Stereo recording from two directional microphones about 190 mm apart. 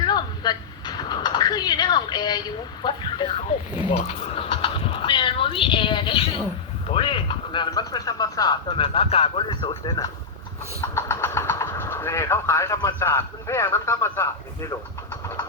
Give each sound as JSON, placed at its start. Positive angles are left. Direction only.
{"t": 0.0, "sound": "a sound", "side_deg": 20}
{"t": 2.8, "sound": "speech", "side_deg": 25}
{"t": 10.9, "sound": "vehicle", "side_deg": 15}
{"t": 12.9, "sound": "a man's voice", "side_deg": 10}